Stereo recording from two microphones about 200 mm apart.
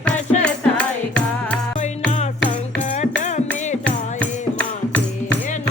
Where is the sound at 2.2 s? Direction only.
35° left (ahead or behind).